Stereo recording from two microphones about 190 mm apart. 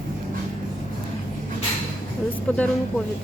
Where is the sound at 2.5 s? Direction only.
5° left (ahead or behind).